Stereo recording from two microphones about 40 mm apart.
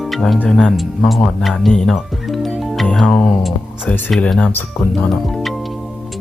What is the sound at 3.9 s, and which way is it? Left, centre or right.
Speech, left.